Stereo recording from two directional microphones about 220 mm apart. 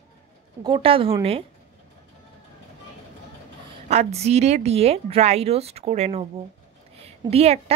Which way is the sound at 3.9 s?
30° right (ahead or behind).